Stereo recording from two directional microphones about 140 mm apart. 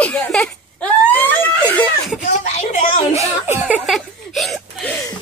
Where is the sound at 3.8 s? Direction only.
Centre (ahead or behind).